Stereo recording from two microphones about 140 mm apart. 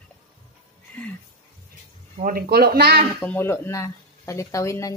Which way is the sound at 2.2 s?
90° right.